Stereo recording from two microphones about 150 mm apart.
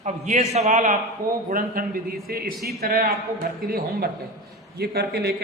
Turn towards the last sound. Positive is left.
turn(degrees=-90)